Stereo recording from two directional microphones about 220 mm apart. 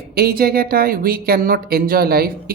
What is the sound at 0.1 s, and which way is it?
Speech, 45° right (ahead or behind).